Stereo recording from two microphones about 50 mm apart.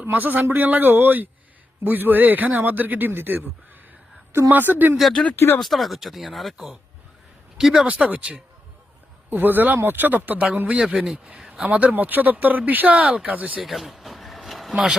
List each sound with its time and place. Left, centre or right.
0.0 s speech: right
4.3 s a woman's voice: right
4.5 s speech: right
5.5 s speech: centre
7.9 s speech: right
9.3 s speech: right
10.9 s speech: centre
11.3 s a sound: centre
11.6 s speech: right
13.6 s a sound: centre